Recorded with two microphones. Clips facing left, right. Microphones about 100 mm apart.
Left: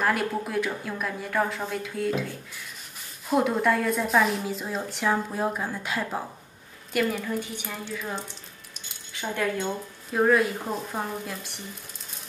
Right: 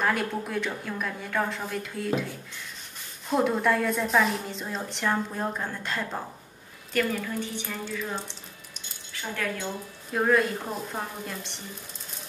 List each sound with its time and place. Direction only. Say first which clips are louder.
0.0 s a woman's voice: left 1 dB; centre (ahead or behind)
3.3 s a woman's voice: left 1 dB; centre (ahead or behind)
9.3 s speech: left 4 dB; 20° left (ahead or behind)
10.1 s a woman's voice: left 2 dB; 5° left (ahead or behind)